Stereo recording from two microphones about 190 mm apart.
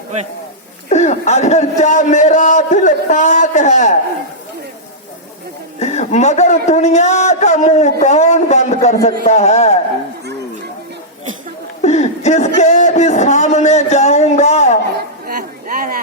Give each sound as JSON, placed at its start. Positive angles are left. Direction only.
{"t": 0.9, "sound": "a man's voice", "side_deg": 35}
{"t": 5.8, "sound": "a man's voice", "side_deg": 35}
{"t": 11.8, "sound": "a man's voice", "side_deg": 35}
{"t": 15.3, "sound": "a sound", "side_deg": -50}